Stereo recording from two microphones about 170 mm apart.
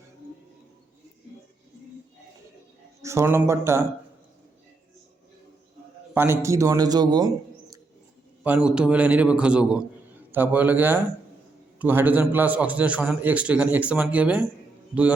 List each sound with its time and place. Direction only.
3.0 s a man's voice: 15° right (ahead or behind)
6.1 s a man's voice: 15° right (ahead or behind)
8.4 s a man's voice: 5° right (ahead or behind)